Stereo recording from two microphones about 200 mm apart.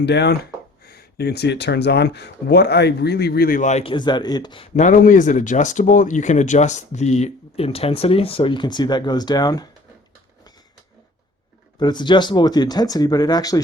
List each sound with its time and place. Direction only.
0.0 s speech: 55° left (ahead or behind); by 9.6 s 20° left (ahead or behind)
11.8 s speech: 20° left (ahead or behind)